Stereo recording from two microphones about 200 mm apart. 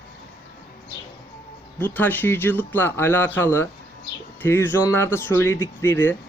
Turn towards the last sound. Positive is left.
turn(degrees=10)  # may be behind; listen again after turning